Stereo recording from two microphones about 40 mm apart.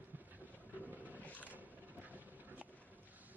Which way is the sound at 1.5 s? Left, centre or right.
Right.